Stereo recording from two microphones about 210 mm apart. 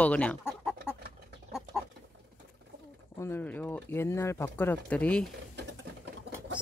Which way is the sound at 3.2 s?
10° left (ahead or behind).